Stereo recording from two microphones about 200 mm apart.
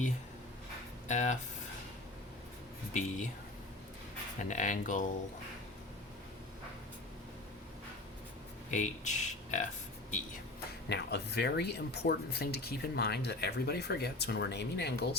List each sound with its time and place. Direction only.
1.0 s speech: 35° left (ahead or behind)
2.9 s speech: 35° left (ahead or behind)
4.4 s speech: 40° left (ahead or behind)
8.7 s speech: 35° left (ahead or behind)
10.8 s speech: 55° left (ahead or behind)